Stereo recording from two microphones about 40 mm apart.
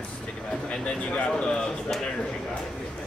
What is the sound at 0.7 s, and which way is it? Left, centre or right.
Speech, left.